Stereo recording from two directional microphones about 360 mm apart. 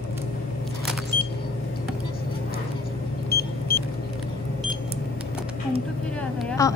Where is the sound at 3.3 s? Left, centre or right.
Left.